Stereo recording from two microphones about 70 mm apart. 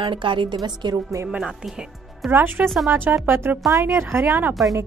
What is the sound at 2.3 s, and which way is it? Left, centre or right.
Speech, right.